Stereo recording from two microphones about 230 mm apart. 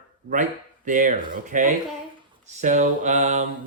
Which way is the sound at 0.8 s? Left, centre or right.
Right.